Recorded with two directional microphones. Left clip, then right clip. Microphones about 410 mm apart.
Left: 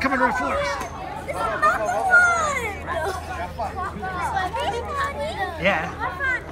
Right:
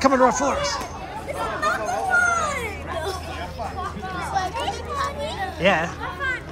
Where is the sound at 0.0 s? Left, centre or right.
Centre.